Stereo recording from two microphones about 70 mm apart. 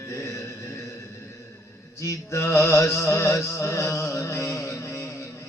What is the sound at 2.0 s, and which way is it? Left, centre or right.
Music, left.